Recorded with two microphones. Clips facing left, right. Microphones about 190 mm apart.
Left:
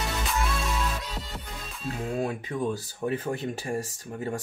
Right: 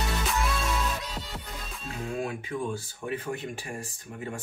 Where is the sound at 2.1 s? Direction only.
35° left (ahead or behind).